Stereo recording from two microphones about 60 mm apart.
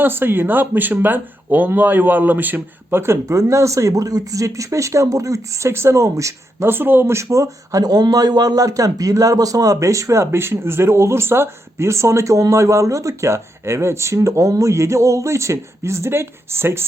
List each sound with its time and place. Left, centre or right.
0.0 s speech: right
3.0 s speech: right
3.3 s speech: right
6.7 s speech: right